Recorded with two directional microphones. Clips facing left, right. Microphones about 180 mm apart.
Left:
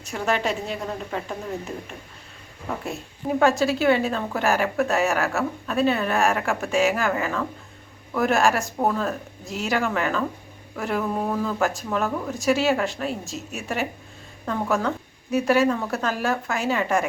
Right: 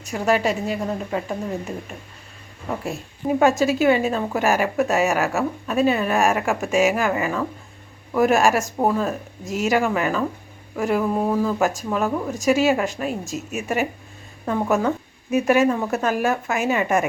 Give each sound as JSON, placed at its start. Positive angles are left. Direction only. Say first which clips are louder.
{"t": 0.1, "sound": "a woman's voice", "louder": "right 4 dB", "side_deg": -5}
{"t": 3.2, "sound": "speech", "louder": "right 2 dB", "side_deg": -15}